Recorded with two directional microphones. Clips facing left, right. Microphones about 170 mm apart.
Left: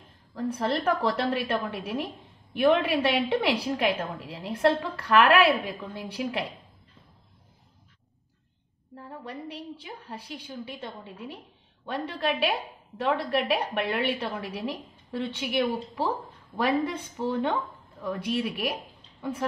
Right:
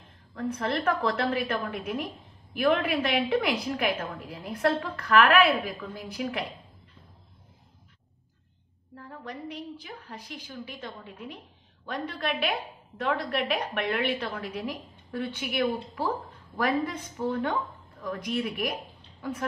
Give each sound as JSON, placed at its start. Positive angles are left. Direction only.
{"t": 0.3, "sound": "a woman's voice", "side_deg": 30}
{"t": 8.9, "sound": "a woman's voice", "side_deg": 30}